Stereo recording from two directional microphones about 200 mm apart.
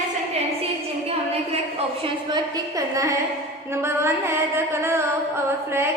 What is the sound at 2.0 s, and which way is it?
A woman's voice, 20° right (ahead or behind).